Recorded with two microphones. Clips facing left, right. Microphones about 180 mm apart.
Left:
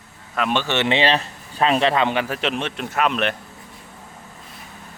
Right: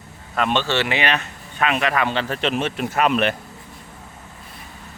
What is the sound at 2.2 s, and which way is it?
A man's voice, 5° left (ahead or behind).